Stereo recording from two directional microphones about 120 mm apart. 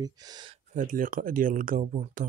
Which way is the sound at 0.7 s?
90° right.